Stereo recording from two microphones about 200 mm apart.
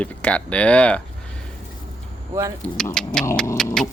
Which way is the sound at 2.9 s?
5° left (ahead or behind).